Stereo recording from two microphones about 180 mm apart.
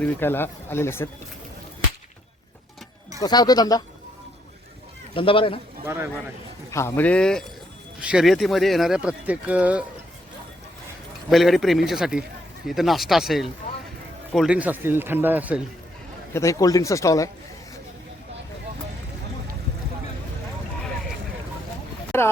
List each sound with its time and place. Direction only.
0.0 s speech: 10° left (ahead or behind)
3.2 s speech: 20° left (ahead or behind)
5.1 s speech: 30° left (ahead or behind)
5.8 s speech: 15° right (ahead or behind)
6.7 s speech: 15° left (ahead or behind); by 9.8 s 5° right (ahead or behind)
11.3 s speech: centre (ahead or behind)
16.3 s speech: 15° left (ahead or behind)
22.1 s speech: 15° left (ahead or behind)